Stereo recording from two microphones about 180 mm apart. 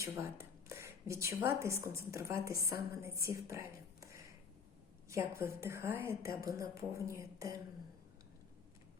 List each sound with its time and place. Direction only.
0.0 s a woman's voice: 15° right (ahead or behind)